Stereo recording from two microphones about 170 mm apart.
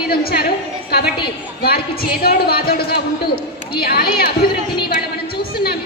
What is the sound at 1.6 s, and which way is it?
Speech, 65° left (ahead or behind).